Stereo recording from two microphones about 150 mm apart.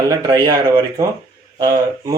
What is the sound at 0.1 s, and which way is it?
Speech, 30° right (ahead or behind).